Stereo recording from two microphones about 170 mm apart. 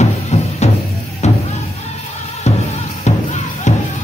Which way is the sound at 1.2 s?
40° left (ahead or behind).